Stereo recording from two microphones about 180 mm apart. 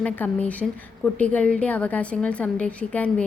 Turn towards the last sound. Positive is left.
turn(degrees=5)  # may be behind; listen again after turning